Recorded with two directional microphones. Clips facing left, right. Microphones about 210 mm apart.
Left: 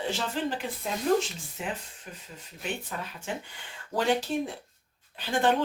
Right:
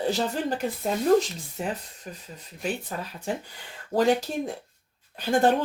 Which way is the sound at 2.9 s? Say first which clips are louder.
Right 4 dB; 35° right (ahead or behind).